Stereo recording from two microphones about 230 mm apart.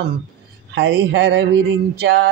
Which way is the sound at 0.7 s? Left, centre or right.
Right.